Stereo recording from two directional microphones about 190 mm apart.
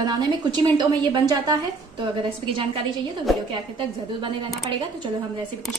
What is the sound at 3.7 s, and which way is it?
Speech, 25° right (ahead or behind).